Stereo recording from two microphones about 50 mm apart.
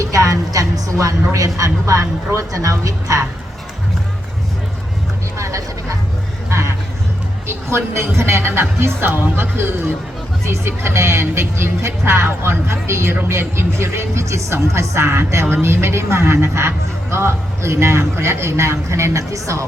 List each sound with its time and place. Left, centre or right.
0.0 s music: right
0.9 s speech: right
5.4 s a sound: right
6.5 s a sound: right
7.4 s a man's voice: right
9.0 s speech: right
10.4 s a man's voice: right